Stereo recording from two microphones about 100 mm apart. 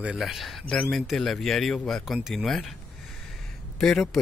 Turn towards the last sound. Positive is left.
turn(degrees=0)  # may be behind; listen again after turning